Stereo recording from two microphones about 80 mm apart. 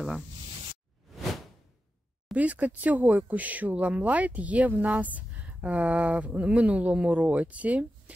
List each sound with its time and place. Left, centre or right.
2.3 s speech: centre